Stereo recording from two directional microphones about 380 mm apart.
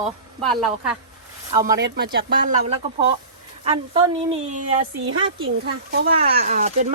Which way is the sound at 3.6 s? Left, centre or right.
Centre.